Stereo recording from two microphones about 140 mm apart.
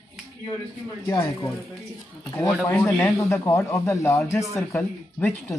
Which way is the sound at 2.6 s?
20° left (ahead or behind).